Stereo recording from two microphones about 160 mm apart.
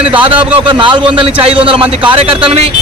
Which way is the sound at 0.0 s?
30° right (ahead or behind).